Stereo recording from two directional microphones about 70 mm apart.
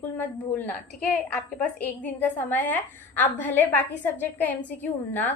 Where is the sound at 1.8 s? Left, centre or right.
Left.